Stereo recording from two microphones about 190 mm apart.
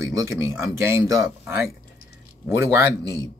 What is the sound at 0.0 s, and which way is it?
Speech, 15° right (ahead or behind).